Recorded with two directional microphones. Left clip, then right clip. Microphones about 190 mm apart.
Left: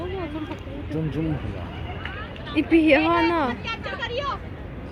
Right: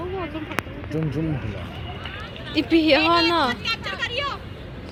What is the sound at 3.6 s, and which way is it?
Vehicle, 30° left (ahead or behind).